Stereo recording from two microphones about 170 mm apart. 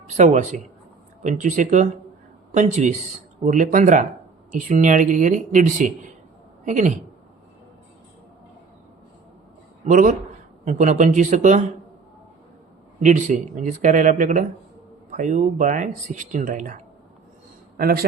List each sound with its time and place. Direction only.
0.1 s speech: 45° right (ahead or behind)
9.8 s speech: 50° right (ahead or behind)
13.0 s speech: 45° right (ahead or behind)
17.7 s a man's voice: 60° right (ahead or behind)